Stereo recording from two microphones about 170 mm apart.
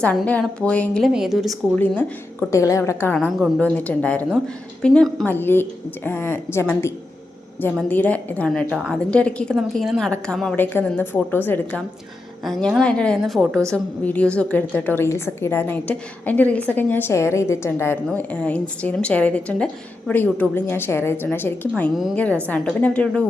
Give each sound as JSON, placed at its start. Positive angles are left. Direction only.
{"t": 0.0, "sound": "a woman's voice", "side_deg": 5}
{"t": 1.8, "sound": "a woman's voice", "side_deg": 10}
{"t": 3.2, "sound": "a woman's voice", "side_deg": 0}